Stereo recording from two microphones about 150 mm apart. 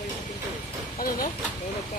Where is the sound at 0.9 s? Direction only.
65° left (ahead or behind).